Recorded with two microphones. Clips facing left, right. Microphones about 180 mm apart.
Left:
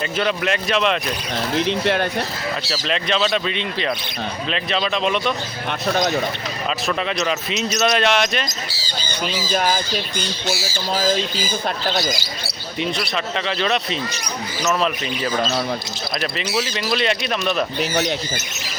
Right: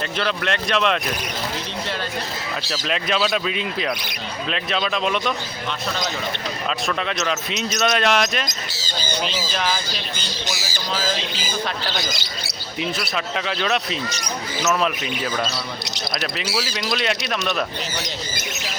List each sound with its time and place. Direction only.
0.2 s speech: 5° left (ahead or behind)
1.5 s speech: 65° left (ahead or behind)
2.9 s speech: 5° right (ahead or behind)
6.8 s speech: centre (ahead or behind)
9.6 s speech: 45° left (ahead or behind)
12.8 s speech: centre (ahead or behind)
16.7 s speech: 5° left (ahead or behind)